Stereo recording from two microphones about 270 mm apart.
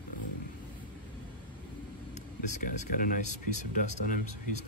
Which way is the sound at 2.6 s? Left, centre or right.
Left.